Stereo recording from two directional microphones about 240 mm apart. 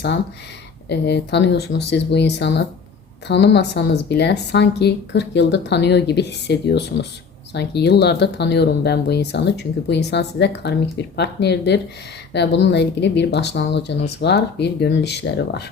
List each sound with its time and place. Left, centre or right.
0.9 s speech: left